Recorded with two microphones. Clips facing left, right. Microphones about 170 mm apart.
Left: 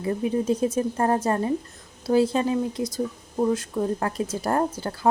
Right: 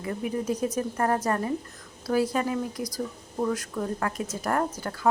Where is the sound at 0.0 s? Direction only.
30° left (ahead or behind).